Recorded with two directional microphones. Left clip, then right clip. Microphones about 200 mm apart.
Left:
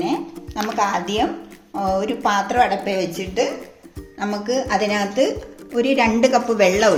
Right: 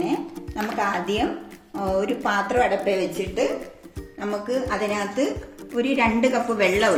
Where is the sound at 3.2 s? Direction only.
50° left (ahead or behind).